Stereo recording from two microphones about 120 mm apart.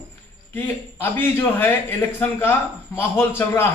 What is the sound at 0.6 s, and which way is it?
A man's voice, 15° left (ahead or behind).